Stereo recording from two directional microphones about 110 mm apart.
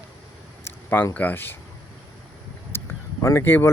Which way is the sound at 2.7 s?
20° left (ahead or behind).